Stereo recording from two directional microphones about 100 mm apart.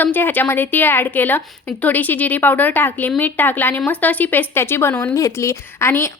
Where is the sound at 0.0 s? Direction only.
20° left (ahead or behind).